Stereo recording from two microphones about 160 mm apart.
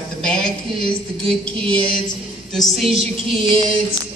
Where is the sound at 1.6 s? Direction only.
10° left (ahead or behind).